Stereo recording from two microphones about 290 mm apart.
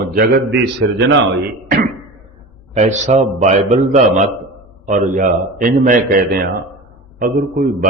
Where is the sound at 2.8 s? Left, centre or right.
Right.